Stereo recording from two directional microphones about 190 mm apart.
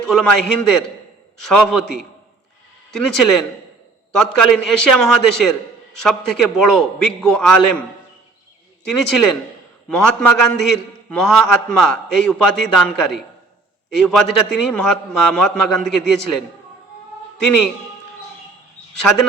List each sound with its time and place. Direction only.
0.0 s a man's voice: 5° left (ahead or behind)
8.8 s a man's voice: centre (ahead or behind)